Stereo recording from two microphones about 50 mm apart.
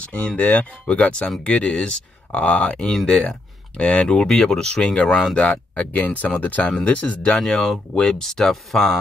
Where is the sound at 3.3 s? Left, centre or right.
Left.